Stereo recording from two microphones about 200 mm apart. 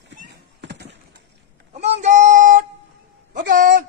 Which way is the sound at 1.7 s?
35° right (ahead or behind).